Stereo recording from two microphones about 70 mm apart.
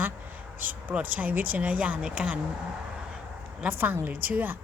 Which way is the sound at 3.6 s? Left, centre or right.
Right.